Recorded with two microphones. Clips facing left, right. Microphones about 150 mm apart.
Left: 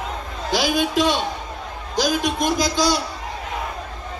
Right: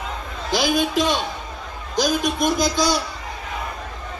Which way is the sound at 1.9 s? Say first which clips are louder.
Even; 50° right (ahead or behind).